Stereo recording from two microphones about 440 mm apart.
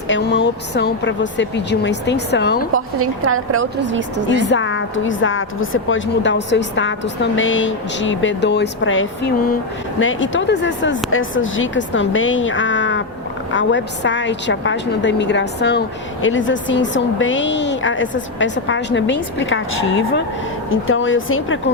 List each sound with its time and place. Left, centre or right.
0.1 s a woman's voice: left
2.7 s a woman's voice: right
4.4 s a woman's voice: left